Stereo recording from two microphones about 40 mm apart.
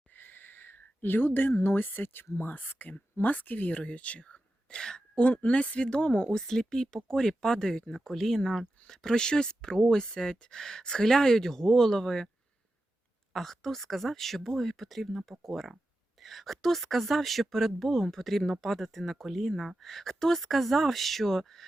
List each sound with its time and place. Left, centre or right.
0.1 s speech: left
4.3 s whispering: centre
5.5 s a woman's voice: left
6.5 s speech: centre
13.3 s speech: centre